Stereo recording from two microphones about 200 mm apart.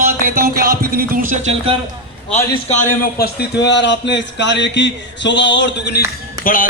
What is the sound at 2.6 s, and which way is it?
Speech, 40° left (ahead or behind).